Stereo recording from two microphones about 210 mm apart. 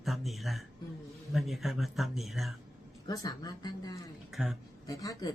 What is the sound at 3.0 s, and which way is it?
Speech, 15° left (ahead or behind).